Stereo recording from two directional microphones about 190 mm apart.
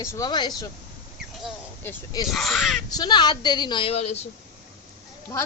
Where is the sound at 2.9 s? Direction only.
20° left (ahead or behind).